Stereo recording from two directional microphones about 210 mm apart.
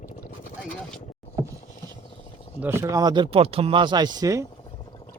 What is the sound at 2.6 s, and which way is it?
Speech, 10° right (ahead or behind).